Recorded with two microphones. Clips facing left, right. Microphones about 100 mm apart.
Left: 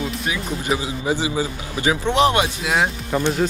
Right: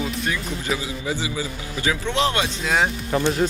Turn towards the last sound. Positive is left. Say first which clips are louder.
# left 1 dB
turn(degrees=5)  # may be behind; listen again after turning